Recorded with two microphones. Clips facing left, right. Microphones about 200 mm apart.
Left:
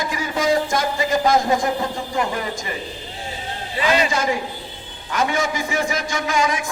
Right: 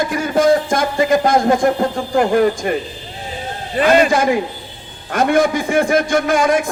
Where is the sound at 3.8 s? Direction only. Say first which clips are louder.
Right 7 dB; 55° right (ahead or behind).